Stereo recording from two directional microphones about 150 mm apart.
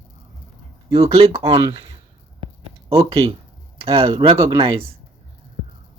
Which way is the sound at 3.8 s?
40° right (ahead or behind).